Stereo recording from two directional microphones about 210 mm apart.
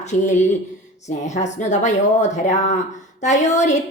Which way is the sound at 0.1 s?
35° left (ahead or behind).